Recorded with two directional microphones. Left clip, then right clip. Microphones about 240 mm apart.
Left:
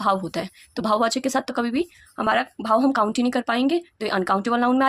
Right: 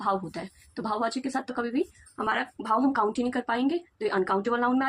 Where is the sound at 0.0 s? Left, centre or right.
Left.